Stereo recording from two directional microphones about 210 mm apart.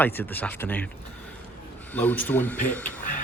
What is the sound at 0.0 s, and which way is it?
Speech, 10° left (ahead or behind).